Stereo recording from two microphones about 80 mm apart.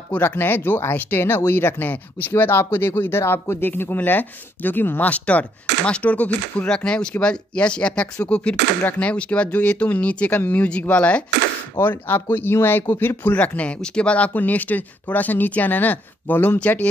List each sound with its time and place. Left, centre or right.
0.1 s speech: left
11.7 s speech: left